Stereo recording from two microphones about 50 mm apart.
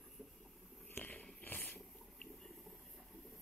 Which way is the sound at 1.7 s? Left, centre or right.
Centre.